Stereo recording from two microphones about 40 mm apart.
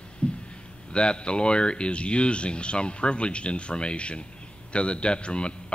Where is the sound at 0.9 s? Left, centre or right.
Left.